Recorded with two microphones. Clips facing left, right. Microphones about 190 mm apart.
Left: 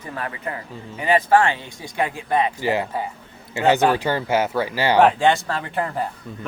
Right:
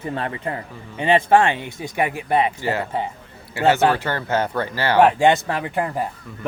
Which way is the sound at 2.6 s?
15° left (ahead or behind).